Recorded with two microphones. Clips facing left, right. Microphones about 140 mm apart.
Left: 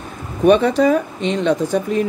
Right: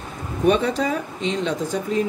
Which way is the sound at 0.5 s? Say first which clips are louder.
Left 7 dB; 65° left (ahead or behind).